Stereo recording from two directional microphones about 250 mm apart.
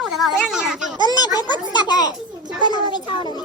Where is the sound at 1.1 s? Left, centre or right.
Centre.